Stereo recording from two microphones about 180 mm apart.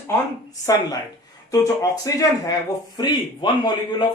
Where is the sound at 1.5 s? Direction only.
20° left (ahead or behind).